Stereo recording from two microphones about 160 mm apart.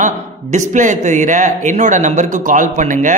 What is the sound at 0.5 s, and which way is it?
A man's voice, 50° right (ahead or behind).